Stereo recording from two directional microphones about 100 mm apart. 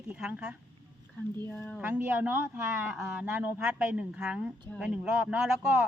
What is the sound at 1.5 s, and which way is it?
Speech, 20° left (ahead or behind).